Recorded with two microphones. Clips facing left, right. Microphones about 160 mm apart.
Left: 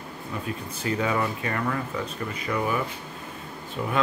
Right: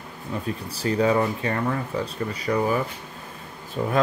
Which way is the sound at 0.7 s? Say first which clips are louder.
Right 6 dB; 35° right (ahead or behind).